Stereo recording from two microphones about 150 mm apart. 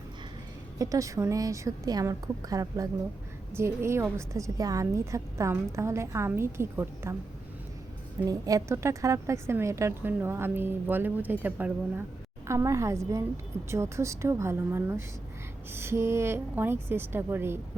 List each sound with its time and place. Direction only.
0.8 s a woman's voice: 20° right (ahead or behind)
8.3 s a woman's voice: 25° right (ahead or behind)